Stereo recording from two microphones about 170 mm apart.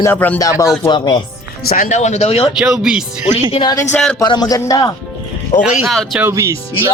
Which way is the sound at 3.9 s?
5° left (ahead or behind).